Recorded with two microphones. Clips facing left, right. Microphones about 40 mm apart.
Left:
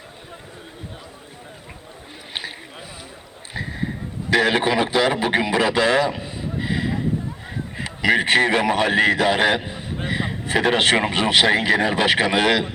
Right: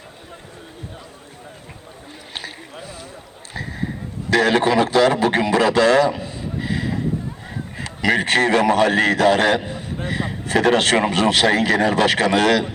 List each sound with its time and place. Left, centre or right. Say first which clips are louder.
2.3 s boat: left 1 dB; left
3.5 s a sound: even; left
7.8 s a man's voice: even; centre